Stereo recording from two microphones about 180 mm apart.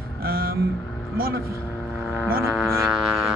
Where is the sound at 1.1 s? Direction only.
55° right (ahead or behind).